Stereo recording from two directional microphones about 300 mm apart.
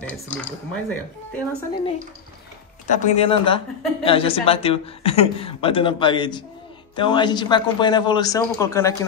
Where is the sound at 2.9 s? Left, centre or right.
Left.